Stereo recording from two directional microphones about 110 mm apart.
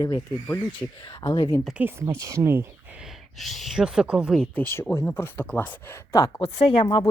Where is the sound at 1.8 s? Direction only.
25° right (ahead or behind).